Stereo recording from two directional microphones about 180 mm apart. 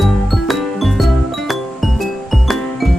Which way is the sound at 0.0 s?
Centre (ahead or behind).